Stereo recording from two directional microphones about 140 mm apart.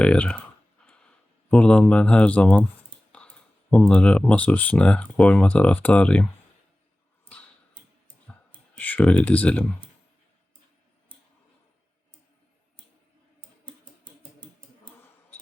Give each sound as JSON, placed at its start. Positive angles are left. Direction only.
{"t": 0.0, "sound": "speech", "side_deg": 10}
{"t": 1.5, "sound": "speech", "side_deg": 5}
{"t": 8.8, "sound": "speech", "side_deg": 10}
{"t": 13.7, "sound": "typewriter", "side_deg": -35}